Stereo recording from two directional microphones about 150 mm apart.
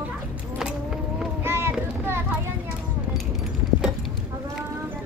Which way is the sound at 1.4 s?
15° right (ahead or behind).